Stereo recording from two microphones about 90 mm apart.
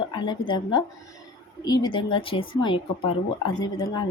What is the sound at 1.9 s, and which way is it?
A woman's voice, 75° left (ahead or behind).